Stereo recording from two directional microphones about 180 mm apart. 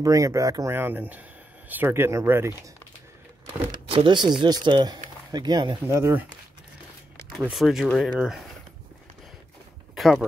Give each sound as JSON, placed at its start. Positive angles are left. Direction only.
{"t": 0.0, "sound": "speech", "side_deg": -20}
{"t": 3.7, "sound": "speech", "side_deg": -25}
{"t": 7.3, "sound": "speech", "side_deg": 0}
{"t": 9.9, "sound": "a sound", "side_deg": 0}